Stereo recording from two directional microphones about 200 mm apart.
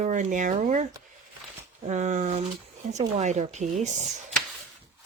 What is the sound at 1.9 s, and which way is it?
Speech, 35° right (ahead or behind).